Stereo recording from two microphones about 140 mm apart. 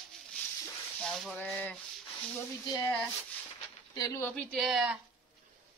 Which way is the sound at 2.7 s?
25° left (ahead or behind).